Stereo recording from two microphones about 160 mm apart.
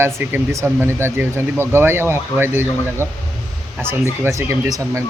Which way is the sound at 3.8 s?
15° right (ahead or behind).